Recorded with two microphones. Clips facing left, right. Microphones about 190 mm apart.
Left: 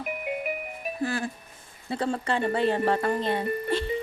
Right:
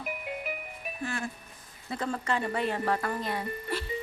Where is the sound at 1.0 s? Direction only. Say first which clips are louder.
Left 5 dB; 35° left (ahead or behind).